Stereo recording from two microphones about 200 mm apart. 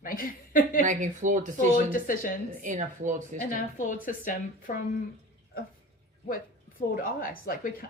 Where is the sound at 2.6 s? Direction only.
40° right (ahead or behind).